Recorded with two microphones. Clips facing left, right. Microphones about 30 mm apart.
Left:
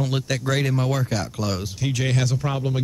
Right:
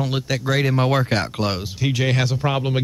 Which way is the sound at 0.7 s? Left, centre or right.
Right.